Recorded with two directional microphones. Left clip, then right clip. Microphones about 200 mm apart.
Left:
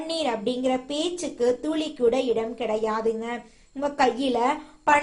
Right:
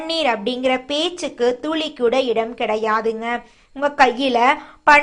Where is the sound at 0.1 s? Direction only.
Centre (ahead or behind).